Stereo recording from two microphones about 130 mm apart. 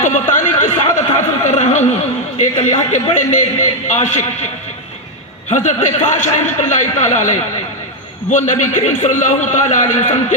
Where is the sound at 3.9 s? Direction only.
65° left (ahead or behind).